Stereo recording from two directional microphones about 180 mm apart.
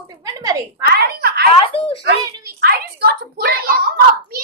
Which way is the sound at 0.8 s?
60° right (ahead or behind).